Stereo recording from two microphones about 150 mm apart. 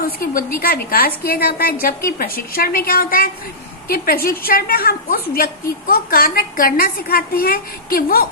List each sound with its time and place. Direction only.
0.0 s a woman's voice: 75° left (ahead or behind)